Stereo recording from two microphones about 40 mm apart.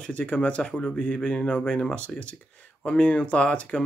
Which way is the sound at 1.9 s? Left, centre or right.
Left.